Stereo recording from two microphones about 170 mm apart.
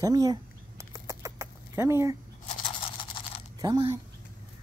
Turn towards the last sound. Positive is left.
turn(degrees=-20)  # may be behind; listen again after turning